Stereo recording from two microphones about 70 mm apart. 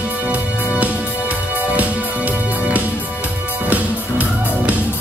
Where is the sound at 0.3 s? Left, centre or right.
Right.